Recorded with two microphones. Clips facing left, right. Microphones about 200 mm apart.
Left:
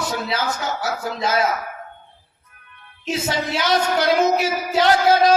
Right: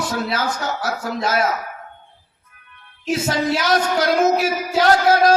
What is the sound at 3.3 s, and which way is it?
A man's voice, 25° left (ahead or behind).